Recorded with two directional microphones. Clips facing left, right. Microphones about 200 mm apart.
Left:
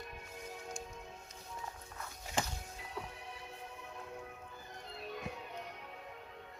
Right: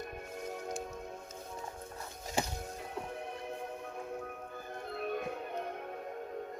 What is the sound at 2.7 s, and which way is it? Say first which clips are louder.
Music: right 5 dB; 50° right (ahead or behind).